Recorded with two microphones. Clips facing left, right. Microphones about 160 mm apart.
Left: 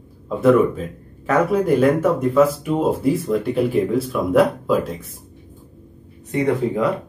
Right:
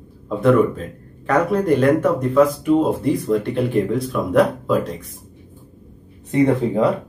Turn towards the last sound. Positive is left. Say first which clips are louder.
# right 3 dB
turn(degrees=-30)  # may be behind; listen again after turning